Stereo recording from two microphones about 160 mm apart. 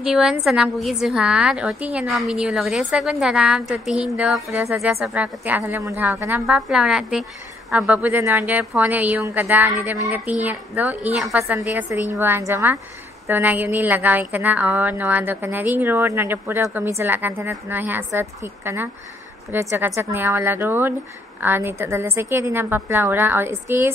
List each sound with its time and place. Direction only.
0.0 s a woman's voice: 5° right (ahead or behind)